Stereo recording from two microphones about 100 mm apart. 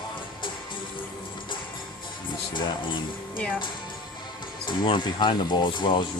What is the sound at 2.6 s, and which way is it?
Speech, 50° left (ahead or behind).